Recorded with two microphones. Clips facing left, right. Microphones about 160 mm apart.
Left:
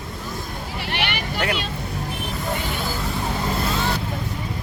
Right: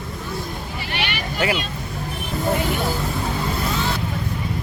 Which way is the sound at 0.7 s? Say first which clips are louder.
Left 2 dB; 65° left (ahead or behind).